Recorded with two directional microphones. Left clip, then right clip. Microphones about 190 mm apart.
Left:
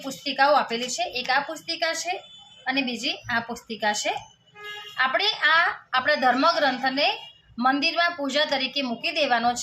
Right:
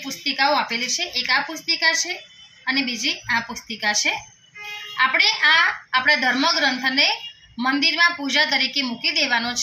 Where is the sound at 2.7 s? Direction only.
40° left (ahead or behind).